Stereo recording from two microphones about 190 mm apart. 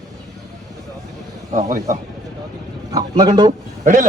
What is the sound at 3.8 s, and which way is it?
Speech, 45° right (ahead or behind).